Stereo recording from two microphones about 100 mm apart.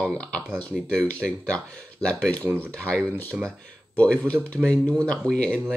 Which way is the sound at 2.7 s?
10° left (ahead or behind).